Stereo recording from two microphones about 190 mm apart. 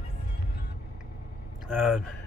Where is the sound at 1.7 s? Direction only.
Centre (ahead or behind).